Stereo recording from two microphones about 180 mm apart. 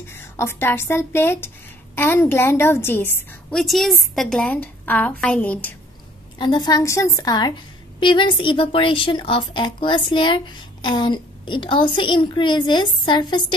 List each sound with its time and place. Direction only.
0.1 s a woman's voice: 15° left (ahead or behind)
6.3 s a woman's voice: 25° left (ahead or behind)